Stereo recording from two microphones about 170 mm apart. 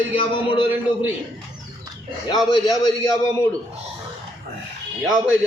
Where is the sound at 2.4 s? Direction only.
25° left (ahead or behind).